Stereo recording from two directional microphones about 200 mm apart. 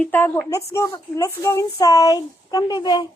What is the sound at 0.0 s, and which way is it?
A child's voice, 10° left (ahead or behind).